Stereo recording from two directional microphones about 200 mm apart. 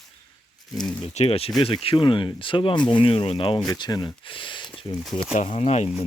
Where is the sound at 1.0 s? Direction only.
30° left (ahead or behind).